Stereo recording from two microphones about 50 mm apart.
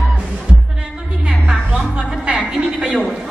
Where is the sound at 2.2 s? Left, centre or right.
Right.